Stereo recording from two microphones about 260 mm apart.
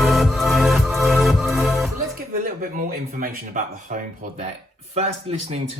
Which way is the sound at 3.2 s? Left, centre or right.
Right.